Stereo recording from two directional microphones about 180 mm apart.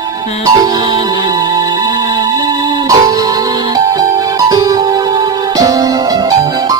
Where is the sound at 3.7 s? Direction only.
20° right (ahead or behind).